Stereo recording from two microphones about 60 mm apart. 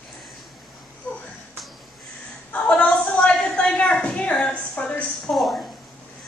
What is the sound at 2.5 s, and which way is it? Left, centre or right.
A woman's voice, left.